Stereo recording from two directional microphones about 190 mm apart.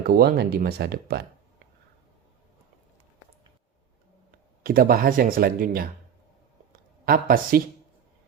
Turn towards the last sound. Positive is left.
turn(degrees=-50)  # may be behind; listen again after turning